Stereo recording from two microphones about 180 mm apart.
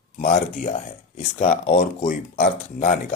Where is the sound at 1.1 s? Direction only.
45° left (ahead or behind).